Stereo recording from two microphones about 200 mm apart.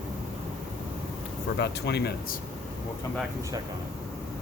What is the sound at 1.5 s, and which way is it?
Speech, 60° left (ahead or behind).